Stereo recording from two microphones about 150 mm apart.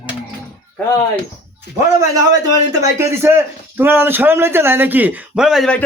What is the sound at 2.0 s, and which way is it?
A man's voice, 25° right (ahead or behind).